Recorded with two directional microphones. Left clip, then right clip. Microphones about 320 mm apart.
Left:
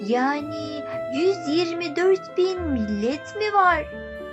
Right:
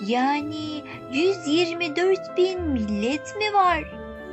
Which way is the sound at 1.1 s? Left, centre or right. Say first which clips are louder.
Even; right.